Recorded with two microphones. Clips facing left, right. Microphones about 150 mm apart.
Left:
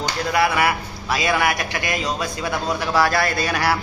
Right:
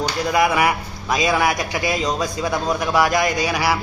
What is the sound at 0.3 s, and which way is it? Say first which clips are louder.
A man's voice: right 1 dB; 15° right (ahead or behind).